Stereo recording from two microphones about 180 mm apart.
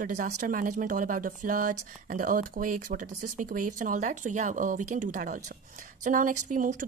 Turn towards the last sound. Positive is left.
turn(degrees=-45)  # may be behind; listen again after turning